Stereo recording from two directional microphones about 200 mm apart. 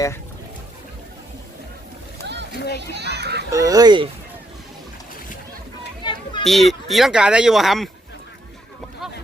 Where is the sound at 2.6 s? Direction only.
55° left (ahead or behind).